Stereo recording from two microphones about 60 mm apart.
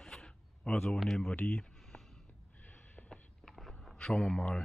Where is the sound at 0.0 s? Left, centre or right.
Centre.